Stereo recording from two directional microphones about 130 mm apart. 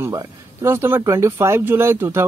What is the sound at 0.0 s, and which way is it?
Speech, 25° right (ahead or behind).